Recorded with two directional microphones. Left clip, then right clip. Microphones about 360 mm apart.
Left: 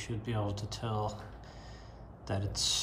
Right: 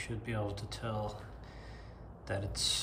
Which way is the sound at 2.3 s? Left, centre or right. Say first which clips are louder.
Left 1 dB; centre.